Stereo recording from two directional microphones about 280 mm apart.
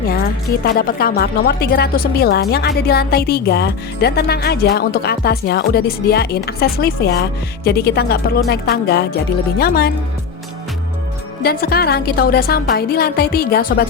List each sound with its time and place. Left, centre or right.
0.6 s a woman's voice: left
11.4 s a woman's voice: left